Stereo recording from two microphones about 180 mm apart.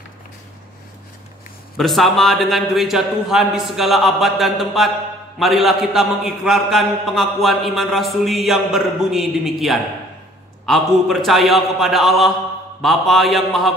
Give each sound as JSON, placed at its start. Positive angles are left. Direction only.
{"t": 1.8, "sound": "a man's voice", "side_deg": 0}